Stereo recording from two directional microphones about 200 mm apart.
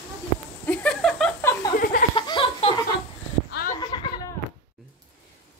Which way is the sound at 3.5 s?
45° left (ahead or behind).